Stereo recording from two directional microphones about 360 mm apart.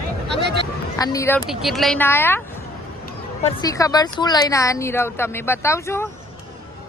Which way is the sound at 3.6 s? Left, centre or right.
Centre.